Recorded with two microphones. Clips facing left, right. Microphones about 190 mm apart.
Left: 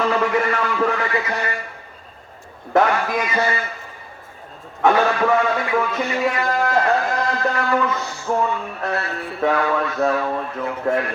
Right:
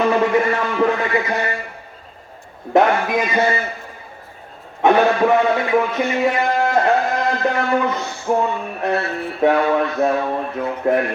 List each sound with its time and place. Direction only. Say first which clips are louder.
0.1 s a man's voice: right 3 dB; 20° right (ahead or behind)
2.7 s a man's voice: right 3 dB; 20° right (ahead or behind)
4.8 s a man's voice: right 3 dB; 20° right (ahead or behind)